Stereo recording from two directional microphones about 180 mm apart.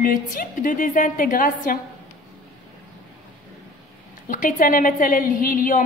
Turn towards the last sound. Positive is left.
turn(degrees=50)  # may be behind; listen again after turning